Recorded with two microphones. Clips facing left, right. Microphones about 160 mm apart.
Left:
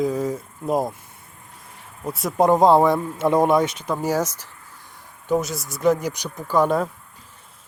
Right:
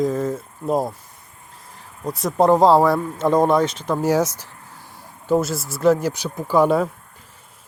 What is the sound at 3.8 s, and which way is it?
Speech, 10° right (ahead or behind).